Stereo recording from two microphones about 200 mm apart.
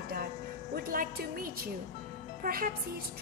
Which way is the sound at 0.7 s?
50° right (ahead or behind).